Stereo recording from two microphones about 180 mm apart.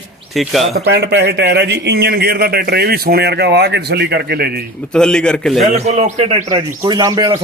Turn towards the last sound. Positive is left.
turn(degrees=-20)  # may be behind; listen again after turning